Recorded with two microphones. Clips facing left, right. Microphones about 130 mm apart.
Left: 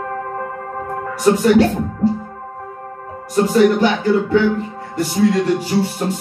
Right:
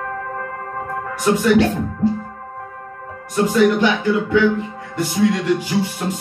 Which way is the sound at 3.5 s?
40° left (ahead or behind).